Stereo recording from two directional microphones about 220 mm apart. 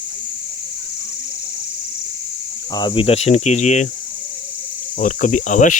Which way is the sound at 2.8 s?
20° left (ahead or behind).